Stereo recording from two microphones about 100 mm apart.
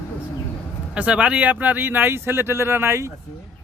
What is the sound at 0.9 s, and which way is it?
Speech, 15° right (ahead or behind).